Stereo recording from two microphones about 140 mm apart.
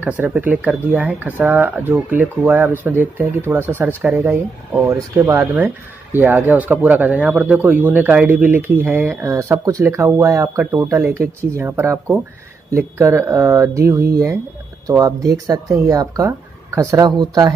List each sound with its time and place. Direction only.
0.0 s speech: 10° right (ahead or behind); by 17.6 s 30° right (ahead or behind)